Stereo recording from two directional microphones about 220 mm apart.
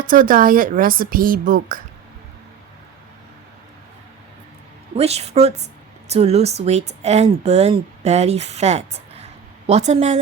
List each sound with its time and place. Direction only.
0.1 s speech: 40° right (ahead or behind)
4.9 s a woman's voice: 30° right (ahead or behind)